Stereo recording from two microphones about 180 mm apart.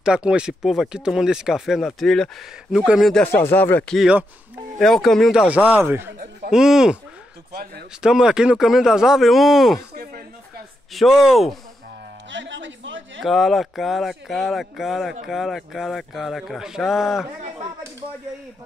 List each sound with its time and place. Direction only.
0.0 s speech: 5° right (ahead or behind)
5.8 s speech: 10° right (ahead or behind)
8.0 s speech: 5° right (ahead or behind)
10.9 s speech: centre (ahead or behind)
12.3 s a sound: 85° right
13.2 s speech: centre (ahead or behind)